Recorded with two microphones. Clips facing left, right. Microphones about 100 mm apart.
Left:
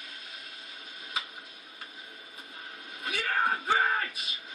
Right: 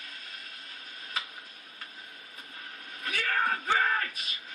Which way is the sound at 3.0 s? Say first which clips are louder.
Left 1 dB; 20° left (ahead or behind).